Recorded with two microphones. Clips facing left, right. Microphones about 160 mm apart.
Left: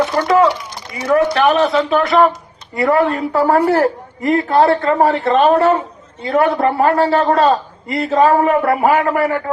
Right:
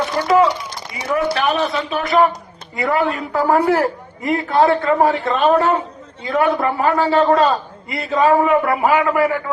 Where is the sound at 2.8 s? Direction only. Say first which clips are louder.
Left 4 dB; 40° left (ahead or behind).